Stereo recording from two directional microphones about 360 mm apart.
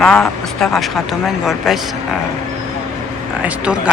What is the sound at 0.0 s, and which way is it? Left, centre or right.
Speech, centre.